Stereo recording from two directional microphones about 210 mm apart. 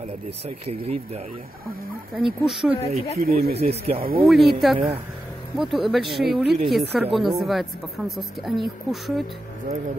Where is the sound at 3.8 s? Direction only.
45° right (ahead or behind).